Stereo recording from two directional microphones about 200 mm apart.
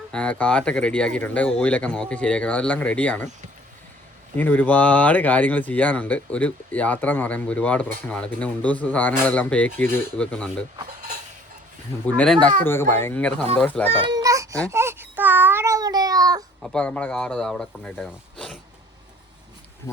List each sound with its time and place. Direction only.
0.1 s speech: 5° left (ahead or behind)
4.4 s speech: 10° left (ahead or behind)
12.0 s speech: 5° left (ahead or behind)
13.8 s a sound: 20° right (ahead or behind)
16.6 s speech: 5° left (ahead or behind)